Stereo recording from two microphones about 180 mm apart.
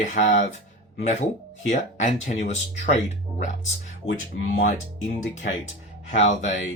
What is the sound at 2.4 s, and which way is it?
Speech, 40° left (ahead or behind).